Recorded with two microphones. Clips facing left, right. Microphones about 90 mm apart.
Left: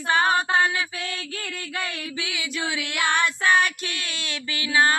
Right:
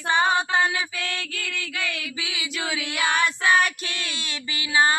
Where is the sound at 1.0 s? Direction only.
70° right (ahead or behind).